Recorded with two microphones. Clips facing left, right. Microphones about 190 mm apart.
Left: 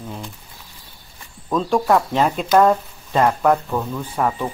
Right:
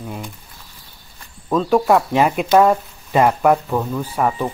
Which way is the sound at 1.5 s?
5° right (ahead or behind).